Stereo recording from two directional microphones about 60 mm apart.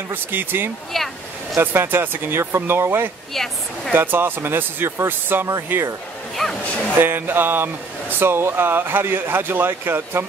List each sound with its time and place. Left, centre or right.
0.1 s speech: right
0.9 s speech: centre
1.6 s speech: right
3.4 s speech: centre
3.9 s speech: right
6.4 s speech: centre
7.0 s speech: right